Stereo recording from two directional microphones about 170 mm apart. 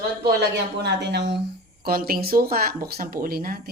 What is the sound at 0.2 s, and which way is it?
Speech, 70° right (ahead or behind).